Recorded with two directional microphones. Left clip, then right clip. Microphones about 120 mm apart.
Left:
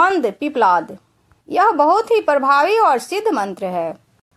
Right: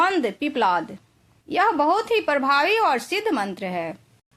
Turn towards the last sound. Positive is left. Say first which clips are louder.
# left 6 dB
turn(degrees=30)  # may be behind; listen again after turning